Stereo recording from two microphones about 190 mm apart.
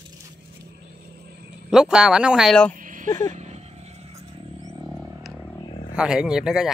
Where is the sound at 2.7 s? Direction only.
45° right (ahead or behind).